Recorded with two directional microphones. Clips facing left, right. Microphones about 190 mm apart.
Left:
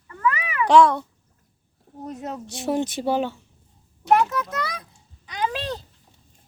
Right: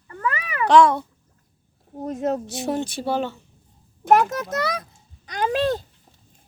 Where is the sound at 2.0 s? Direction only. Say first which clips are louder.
Right 8 dB; 45° right (ahead or behind).